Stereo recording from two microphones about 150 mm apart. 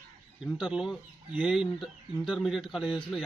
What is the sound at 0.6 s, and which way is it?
Speech, 5° right (ahead or behind).